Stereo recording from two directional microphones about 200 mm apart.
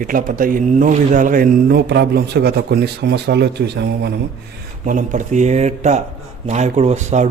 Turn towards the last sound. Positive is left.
turn(degrees=-35)  # may be behind; listen again after turning